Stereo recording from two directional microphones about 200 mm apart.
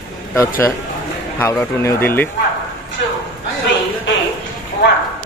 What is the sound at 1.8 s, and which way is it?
Speech, 15° left (ahead or behind).